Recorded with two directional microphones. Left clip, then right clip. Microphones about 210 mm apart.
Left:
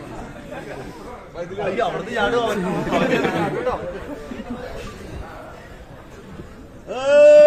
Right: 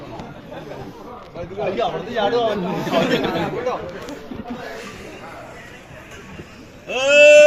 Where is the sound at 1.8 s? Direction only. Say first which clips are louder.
Even; 40° right (ahead or behind).